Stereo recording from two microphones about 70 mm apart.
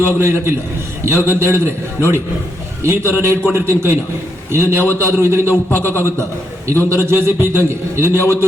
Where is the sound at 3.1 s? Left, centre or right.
Right.